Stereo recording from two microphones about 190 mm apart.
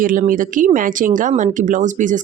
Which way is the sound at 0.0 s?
45° right (ahead or behind).